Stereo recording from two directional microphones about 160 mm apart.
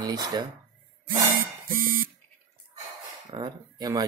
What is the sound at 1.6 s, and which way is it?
Buzzer, 60° right (ahead or behind).